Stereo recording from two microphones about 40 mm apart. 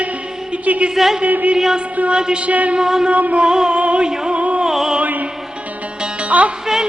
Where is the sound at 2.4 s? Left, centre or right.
Right.